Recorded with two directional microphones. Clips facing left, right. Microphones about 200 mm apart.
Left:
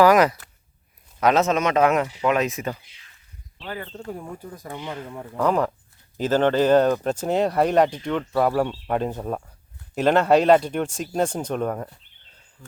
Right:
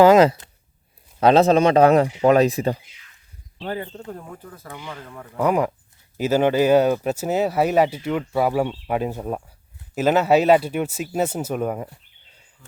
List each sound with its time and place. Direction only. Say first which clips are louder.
0.0 s speech: right 3 dB; 25° right (ahead or behind)
4.1 s speech: left 2 dB; 10° left (ahead or behind)
5.4 s speech: right 1 dB; 10° right (ahead or behind)